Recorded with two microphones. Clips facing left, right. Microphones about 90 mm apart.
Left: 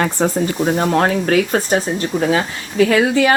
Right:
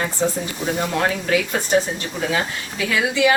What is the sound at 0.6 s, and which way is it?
Speech, 40° left (ahead or behind).